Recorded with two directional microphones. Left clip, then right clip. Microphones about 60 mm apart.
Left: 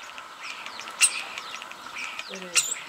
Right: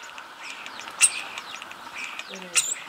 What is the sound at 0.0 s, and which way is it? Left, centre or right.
Bird, centre.